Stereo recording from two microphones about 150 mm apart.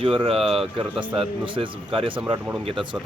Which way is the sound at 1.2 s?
35° right (ahead or behind).